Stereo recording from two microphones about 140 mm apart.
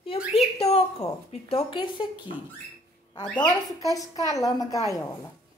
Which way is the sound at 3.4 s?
30° left (ahead or behind).